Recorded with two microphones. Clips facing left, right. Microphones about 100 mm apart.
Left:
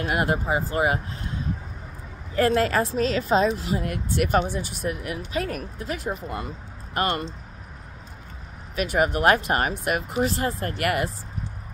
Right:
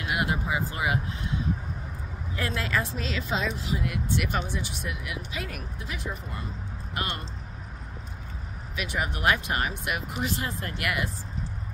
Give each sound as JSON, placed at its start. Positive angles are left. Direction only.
{"t": 0.0, "sound": "a woman's voice", "side_deg": 45}
{"t": 2.3, "sound": "a woman's voice", "side_deg": 50}
{"t": 8.7, "sound": "a woman's voice", "side_deg": 50}